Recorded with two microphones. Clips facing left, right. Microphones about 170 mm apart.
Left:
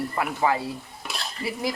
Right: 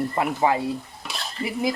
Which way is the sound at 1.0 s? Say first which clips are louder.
Even; centre (ahead or behind).